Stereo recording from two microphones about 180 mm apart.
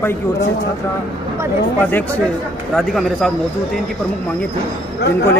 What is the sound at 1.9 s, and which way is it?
A man's voice, 10° left (ahead or behind).